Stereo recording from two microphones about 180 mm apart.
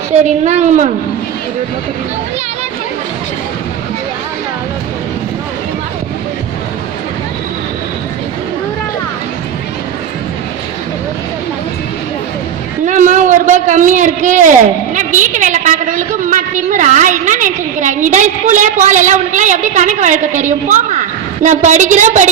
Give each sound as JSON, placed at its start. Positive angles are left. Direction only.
{"t": 0.1, "sound": "a woman's voice", "side_deg": -40}
{"t": 12.8, "sound": "a man's voice", "side_deg": -45}